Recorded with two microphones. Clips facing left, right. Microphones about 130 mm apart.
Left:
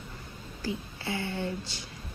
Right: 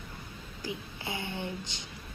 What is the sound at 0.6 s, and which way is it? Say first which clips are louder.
A woman's voice: left 4 dB; 20° right (ahead or behind).